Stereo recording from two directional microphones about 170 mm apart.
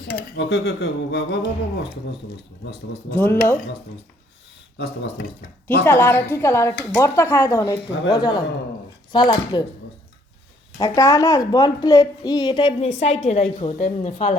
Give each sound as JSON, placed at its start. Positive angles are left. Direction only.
{"t": 0.1, "sound": "speech", "side_deg": 75}
{"t": 3.1, "sound": "a woman's voice", "side_deg": 10}
{"t": 4.8, "sound": "speech", "side_deg": 80}
{"t": 5.8, "sound": "a woman's voice", "side_deg": 10}
{"t": 10.8, "sound": "a woman's voice", "side_deg": 20}